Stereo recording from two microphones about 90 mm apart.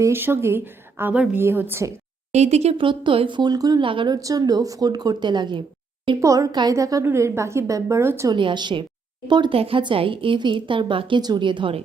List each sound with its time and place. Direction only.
0.0 s a woman's voice: 25° right (ahead or behind)
1.1 s a woman's voice: 10° right (ahead or behind)
1.4 s a woman's voice: 25° right (ahead or behind)
2.7 s speech: 65° right (ahead or behind); by 3.8 s 45° right (ahead or behind)
3.8 s speech: 65° right (ahead or behind)
4.1 s a woman's voice: 40° right (ahead or behind); by 5.6 s 60° right (ahead or behind)
6.1 s a woman's voice: 40° right (ahead or behind)
8.3 s speech: 60° right (ahead or behind)